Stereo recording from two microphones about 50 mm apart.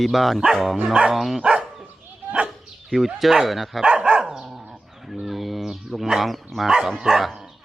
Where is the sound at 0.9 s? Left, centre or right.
Centre.